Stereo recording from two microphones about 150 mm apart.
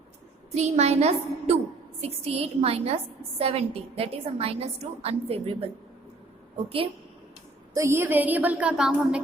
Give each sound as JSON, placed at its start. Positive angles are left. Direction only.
{"t": 0.5, "sound": "a woman's voice", "side_deg": -45}
{"t": 7.7, "sound": "speech", "side_deg": -20}